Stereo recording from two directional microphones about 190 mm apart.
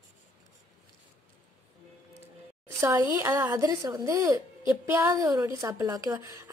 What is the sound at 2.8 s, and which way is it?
A woman's voice, 15° right (ahead or behind).